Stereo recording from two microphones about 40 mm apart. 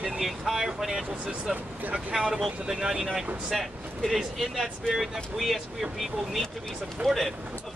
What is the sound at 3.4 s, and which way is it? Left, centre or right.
Speech, centre.